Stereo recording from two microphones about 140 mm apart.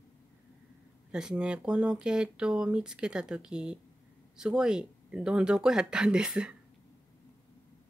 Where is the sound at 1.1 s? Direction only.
5° right (ahead or behind).